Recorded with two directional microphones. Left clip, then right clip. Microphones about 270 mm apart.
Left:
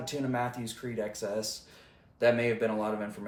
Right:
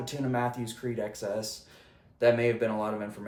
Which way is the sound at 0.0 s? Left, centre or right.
Centre.